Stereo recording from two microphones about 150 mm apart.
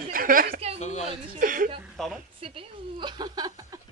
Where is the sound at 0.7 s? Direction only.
50° left (ahead or behind).